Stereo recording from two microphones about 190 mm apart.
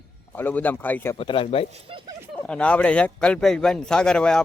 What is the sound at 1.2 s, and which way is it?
Speech, 30° left (ahead or behind).